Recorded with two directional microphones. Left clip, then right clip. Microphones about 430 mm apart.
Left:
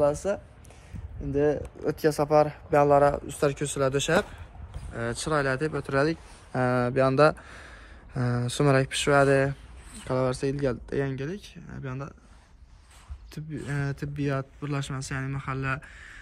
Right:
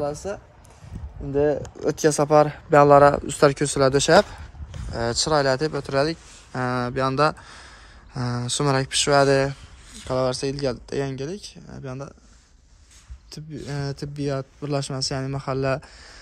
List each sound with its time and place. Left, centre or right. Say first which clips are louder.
0.0 s speech: left 3 dB; centre
1.3 s speech: right 4 dB; centre
13.3 s speech: right 2 dB; centre